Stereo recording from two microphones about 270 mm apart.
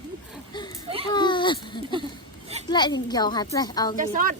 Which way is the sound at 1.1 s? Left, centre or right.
Centre.